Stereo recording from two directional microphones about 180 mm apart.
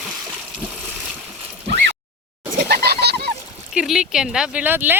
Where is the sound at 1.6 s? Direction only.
75° right (ahead or behind).